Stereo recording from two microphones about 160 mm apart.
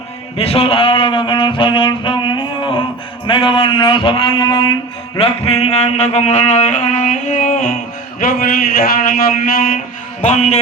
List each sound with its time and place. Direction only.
0.3 s speech: 35° left (ahead or behind)
3.2 s a sound: 30° left (ahead or behind)
5.1 s music: 35° left (ahead or behind); by 7.8 s 55° left (ahead or behind)
8.2 s a man's voice: 65° left (ahead or behind)
10.2 s music: 45° left (ahead or behind)